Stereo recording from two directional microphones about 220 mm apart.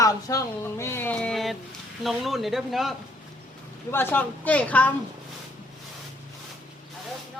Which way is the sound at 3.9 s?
10° left (ahead or behind).